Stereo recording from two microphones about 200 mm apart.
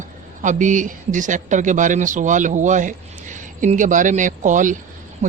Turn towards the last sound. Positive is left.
turn(degrees=-35)  # may be behind; listen again after turning